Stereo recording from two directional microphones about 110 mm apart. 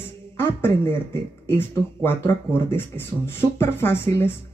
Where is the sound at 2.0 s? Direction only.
20° left (ahead or behind).